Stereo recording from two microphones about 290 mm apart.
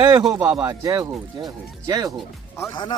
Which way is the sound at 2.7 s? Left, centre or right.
Centre.